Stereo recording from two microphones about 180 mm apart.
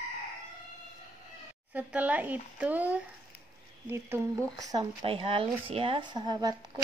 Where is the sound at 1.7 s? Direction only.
10° right (ahead or behind).